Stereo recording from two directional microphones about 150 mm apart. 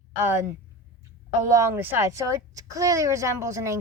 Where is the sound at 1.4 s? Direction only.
20° right (ahead or behind).